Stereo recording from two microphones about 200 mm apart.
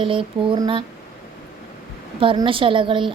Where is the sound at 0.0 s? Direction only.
25° right (ahead or behind).